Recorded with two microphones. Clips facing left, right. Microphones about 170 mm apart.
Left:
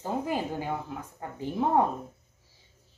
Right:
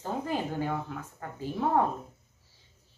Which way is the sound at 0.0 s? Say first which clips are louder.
Left 2 dB; 10° left (ahead or behind).